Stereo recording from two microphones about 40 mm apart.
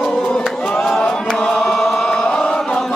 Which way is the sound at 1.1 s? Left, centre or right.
Centre.